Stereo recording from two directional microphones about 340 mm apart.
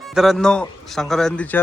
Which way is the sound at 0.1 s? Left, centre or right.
Centre.